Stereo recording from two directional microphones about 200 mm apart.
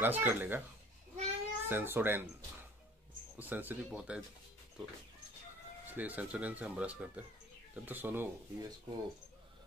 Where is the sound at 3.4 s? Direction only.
10° right (ahead or behind).